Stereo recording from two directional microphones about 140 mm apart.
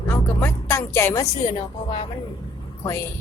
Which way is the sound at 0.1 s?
15° left (ahead or behind).